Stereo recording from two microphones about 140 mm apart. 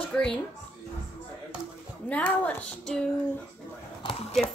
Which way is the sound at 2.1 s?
10° left (ahead or behind).